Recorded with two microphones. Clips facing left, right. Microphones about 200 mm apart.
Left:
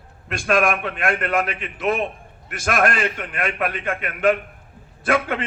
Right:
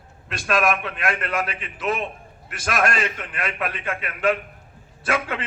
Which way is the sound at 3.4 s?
50° left (ahead or behind).